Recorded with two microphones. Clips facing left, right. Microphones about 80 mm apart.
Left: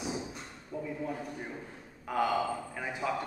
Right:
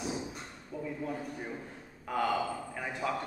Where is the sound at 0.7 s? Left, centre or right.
Centre.